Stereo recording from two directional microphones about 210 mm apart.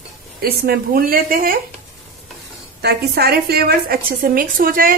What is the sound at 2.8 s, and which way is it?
A woman's voice, 50° right (ahead or behind).